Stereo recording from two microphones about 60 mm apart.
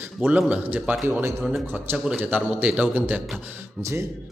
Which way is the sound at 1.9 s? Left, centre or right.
Right.